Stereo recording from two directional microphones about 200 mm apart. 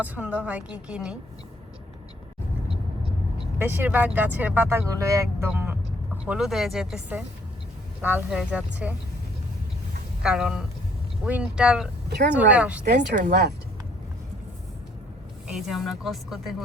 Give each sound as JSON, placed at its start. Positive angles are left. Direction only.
{"t": 0.0, "sound": "speech", "side_deg": -10}
{"t": 3.6, "sound": "speech", "side_deg": -10}
{"t": 10.2, "sound": "speech", "side_deg": -5}
{"t": 12.0, "sound": "speech", "side_deg": -55}
{"t": 12.3, "sound": "speech", "side_deg": -5}
{"t": 12.8, "sound": "speech", "side_deg": -55}
{"t": 15.4, "sound": "speech", "side_deg": 0}